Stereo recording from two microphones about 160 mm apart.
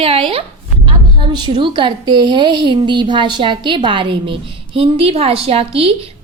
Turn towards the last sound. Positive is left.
turn(degrees=-35)  # may be behind; listen again after turning